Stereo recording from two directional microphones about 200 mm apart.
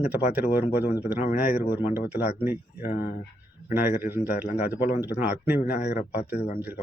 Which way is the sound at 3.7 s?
10° right (ahead or behind).